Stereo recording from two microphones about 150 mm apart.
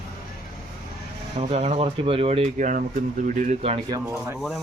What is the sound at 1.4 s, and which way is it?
Speech, 45° right (ahead or behind).